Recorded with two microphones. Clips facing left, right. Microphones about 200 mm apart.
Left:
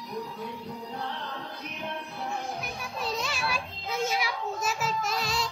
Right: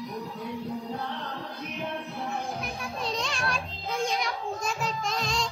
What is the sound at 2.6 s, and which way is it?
Children playing, 5° left (ahead or behind).